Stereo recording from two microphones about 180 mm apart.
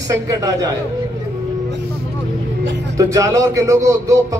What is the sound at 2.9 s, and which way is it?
Speech, 20° right (ahead or behind).